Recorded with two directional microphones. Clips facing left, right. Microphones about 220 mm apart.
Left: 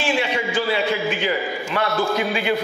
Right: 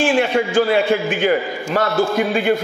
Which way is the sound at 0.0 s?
50° right (ahead or behind).